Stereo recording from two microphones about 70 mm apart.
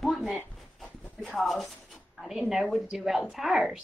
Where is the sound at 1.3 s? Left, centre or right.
Centre.